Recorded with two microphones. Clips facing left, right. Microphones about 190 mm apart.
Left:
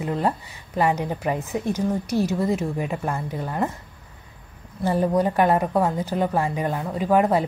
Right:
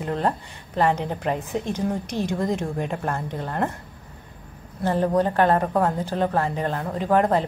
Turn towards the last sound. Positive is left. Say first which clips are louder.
# left 1 dB
turn(degrees=10)  # may be behind; listen again after turning